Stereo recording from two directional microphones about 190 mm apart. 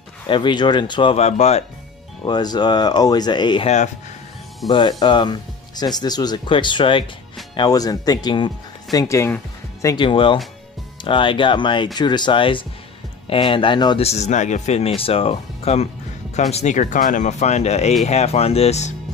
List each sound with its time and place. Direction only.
0.3 s speech: 25° left (ahead or behind)
2.2 s speech: 20° left (ahead or behind)
4.6 s speech: 25° left (ahead or behind)